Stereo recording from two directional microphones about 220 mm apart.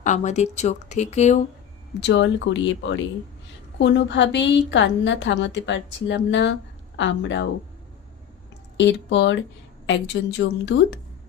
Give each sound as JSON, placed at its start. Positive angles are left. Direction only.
{"t": 0.0, "sound": "speech", "side_deg": 30}
{"t": 2.0, "sound": "a woman's voice", "side_deg": 55}
{"t": 8.8, "sound": "a woman's voice", "side_deg": 55}